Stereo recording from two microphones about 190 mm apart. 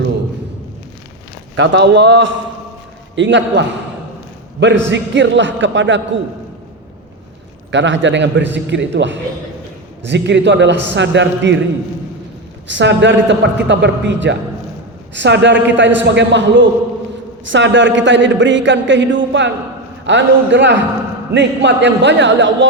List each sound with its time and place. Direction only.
1.5 s speech: 70° right (ahead or behind)
7.7 s speech: 75° right (ahead or behind)
12.6 s speech: 70° right (ahead or behind)